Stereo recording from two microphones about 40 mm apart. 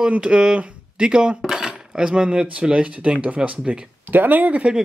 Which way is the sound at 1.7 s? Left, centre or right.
Centre.